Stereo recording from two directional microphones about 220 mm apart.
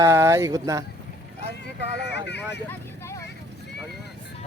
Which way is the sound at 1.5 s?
50° left (ahead or behind).